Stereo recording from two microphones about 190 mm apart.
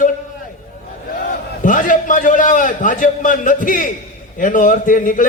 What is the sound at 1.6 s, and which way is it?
A man's voice, 45° left (ahead or behind).